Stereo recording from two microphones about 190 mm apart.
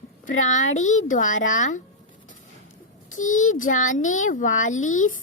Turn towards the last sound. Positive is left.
turn(degrees=40)  # may be behind; listen again after turning